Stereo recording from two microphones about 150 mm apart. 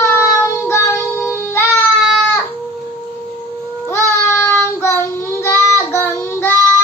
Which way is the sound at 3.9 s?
15° left (ahead or behind).